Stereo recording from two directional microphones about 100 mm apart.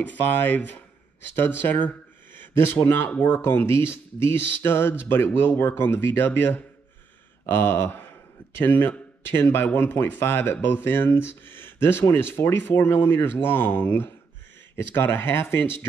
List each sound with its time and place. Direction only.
0.2 s speech: 20° left (ahead or behind)